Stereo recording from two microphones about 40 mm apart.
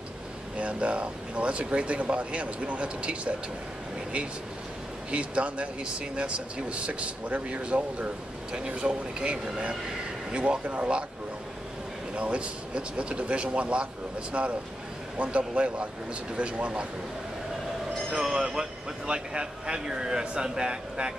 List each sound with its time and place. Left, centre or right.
0.6 s speech: right
5.1 s a man's voice: right
12.2 s a man's voice: right
15.2 s a man's voice: right
18.1 s speech: centre
19.0 s a man's voice: right